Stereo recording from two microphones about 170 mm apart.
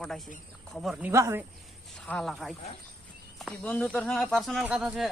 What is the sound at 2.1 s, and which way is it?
Speech, 5° left (ahead or behind).